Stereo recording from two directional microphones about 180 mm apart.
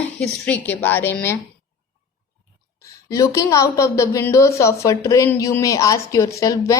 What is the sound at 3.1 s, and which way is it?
A woman's voice, 15° left (ahead or behind).